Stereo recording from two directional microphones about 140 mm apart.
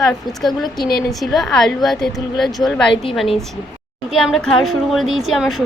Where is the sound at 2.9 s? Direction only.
40° left (ahead or behind).